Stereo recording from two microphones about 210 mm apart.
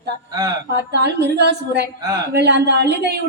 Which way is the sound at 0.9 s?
55° right (ahead or behind).